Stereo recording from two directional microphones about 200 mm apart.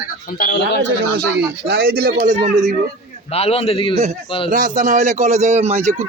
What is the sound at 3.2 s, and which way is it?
Speech, 30° left (ahead or behind).